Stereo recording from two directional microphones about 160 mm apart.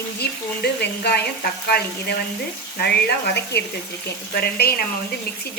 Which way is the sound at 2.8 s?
90° left.